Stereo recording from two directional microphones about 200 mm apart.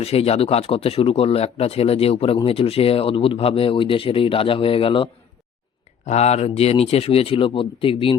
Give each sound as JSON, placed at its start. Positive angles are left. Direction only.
{"t": 0.0, "sound": "speech", "side_deg": 30}
{"t": 6.1, "sound": "speech", "side_deg": 35}